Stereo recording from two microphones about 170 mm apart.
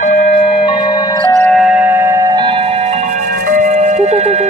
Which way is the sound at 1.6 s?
5° right (ahead or behind).